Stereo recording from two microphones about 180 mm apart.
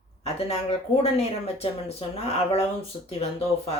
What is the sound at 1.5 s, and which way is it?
Speech, 35° left (ahead or behind).